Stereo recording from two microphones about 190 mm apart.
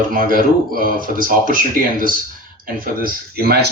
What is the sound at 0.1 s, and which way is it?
Speech, 45° right (ahead or behind).